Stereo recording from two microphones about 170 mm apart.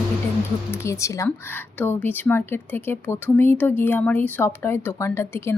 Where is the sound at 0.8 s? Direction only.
15° left (ahead or behind).